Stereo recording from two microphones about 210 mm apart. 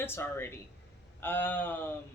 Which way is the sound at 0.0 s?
10° left (ahead or behind).